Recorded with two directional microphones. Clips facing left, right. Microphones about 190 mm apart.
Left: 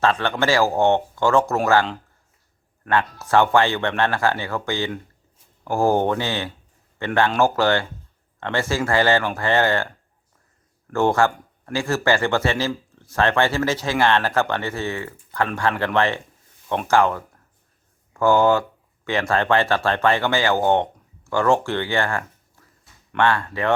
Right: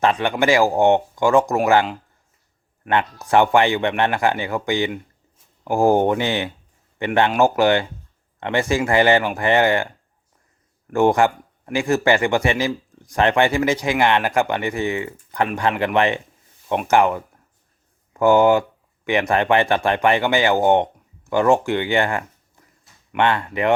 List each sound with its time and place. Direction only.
0.0 s speech: 15° right (ahead or behind)
10.9 s speech: 15° right (ahead or behind)